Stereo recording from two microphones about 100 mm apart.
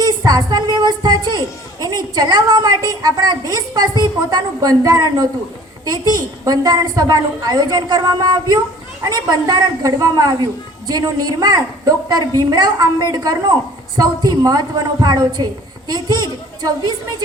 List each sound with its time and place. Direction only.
0.0 s a child's voice: 40° right (ahead or behind)